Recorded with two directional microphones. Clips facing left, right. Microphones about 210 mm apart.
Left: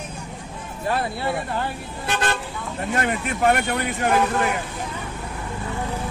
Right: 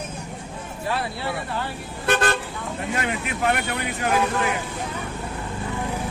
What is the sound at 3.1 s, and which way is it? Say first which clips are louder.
Speech: left 5 dB; 45° left (ahead or behind).